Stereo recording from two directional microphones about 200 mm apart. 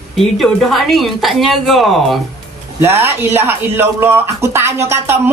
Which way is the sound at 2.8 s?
10° right (ahead or behind).